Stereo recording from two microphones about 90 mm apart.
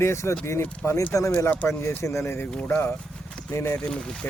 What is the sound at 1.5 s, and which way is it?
Speech, 15° left (ahead or behind).